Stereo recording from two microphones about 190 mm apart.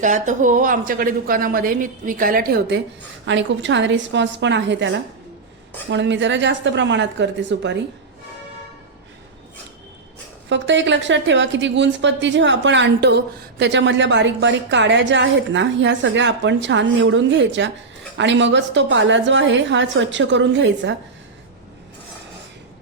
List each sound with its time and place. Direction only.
0.0 s a woman's voice: 40° right (ahead or behind); by 2.8 s 60° right (ahead or behind)
3.2 s a woman's voice: 70° right (ahead or behind)
10.5 s a woman's voice: 70° right (ahead or behind)